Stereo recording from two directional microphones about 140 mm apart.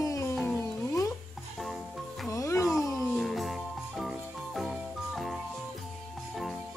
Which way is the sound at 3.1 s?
Centre (ahead or behind).